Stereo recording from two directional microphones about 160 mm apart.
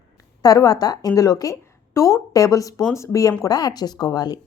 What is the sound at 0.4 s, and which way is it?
A woman's voice, 25° left (ahead or behind).